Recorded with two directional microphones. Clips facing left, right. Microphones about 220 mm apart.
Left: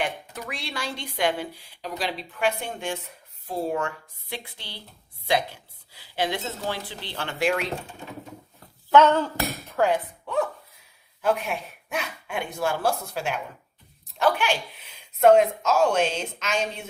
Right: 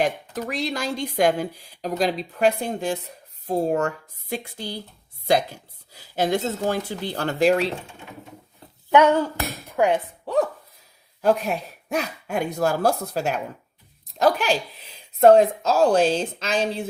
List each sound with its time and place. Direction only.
0.0 s speech: 40° right (ahead or behind)
8.9 s speech: 15° right (ahead or behind)
10.2 s a sound: 35° right (ahead or behind)
11.2 s speech: 40° right (ahead or behind)